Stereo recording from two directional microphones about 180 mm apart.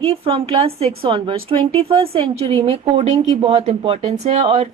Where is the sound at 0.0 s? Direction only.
30° right (ahead or behind).